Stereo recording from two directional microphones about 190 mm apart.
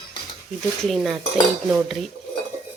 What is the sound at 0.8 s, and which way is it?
Speech, centre (ahead or behind).